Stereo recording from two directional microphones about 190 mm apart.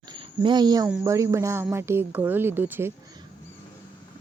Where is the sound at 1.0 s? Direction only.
15° right (ahead or behind).